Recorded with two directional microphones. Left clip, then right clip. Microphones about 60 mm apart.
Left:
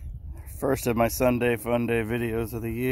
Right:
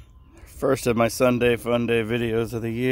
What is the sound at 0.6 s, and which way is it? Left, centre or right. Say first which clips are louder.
Speech: right 3 dB; right.